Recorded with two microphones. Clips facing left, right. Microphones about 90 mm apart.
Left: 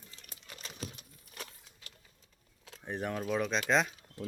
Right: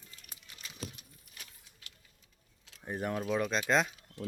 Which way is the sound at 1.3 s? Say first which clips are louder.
Left 9 dB; 45° left (ahead or behind).